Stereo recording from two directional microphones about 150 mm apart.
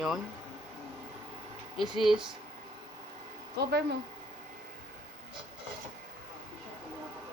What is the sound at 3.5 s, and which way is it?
Speech, 90° right.